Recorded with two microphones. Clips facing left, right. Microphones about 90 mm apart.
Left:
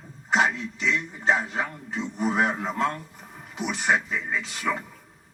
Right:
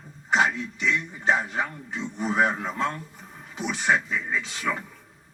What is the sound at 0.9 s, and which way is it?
A man's voice, centre (ahead or behind).